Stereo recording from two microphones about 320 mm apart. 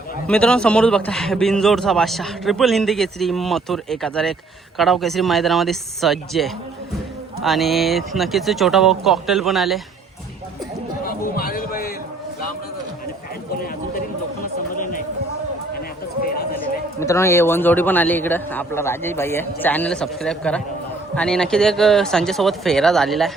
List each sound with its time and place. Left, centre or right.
0.3 s a man's voice: centre
11.0 s a sound: left
17.0 s a man's voice: centre